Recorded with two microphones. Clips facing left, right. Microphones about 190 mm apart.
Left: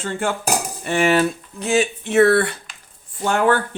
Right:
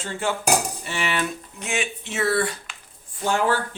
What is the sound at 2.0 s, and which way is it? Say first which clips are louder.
Speech: left 8 dB; 60° left (ahead or behind).